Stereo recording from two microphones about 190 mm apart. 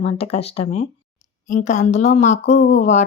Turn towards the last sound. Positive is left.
turn(degrees=35)  # may be behind; listen again after turning